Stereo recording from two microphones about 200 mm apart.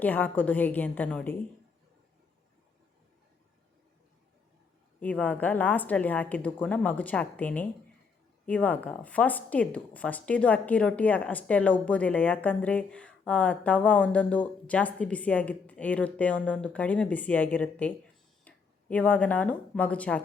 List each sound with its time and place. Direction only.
0.0 s a woman's voice: 10° left (ahead or behind)
4.9 s a woman's voice: 5° left (ahead or behind)